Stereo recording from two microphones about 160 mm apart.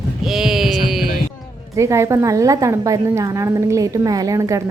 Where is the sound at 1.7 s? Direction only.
15° right (ahead or behind).